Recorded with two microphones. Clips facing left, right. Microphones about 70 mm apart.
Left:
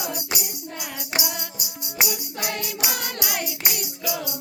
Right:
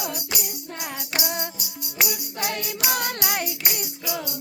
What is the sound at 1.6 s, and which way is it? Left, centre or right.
Music, centre.